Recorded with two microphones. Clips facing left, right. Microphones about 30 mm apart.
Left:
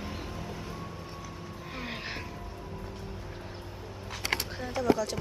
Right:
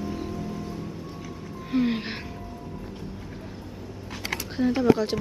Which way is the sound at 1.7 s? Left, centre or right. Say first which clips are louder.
Right 14 dB; centre.